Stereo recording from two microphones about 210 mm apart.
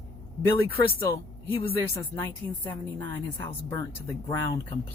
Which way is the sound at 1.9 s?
10° left (ahead or behind).